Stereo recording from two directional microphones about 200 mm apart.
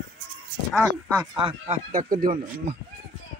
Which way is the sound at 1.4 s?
25° right (ahead or behind).